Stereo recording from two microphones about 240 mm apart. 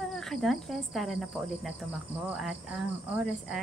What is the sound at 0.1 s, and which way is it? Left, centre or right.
Speech, centre.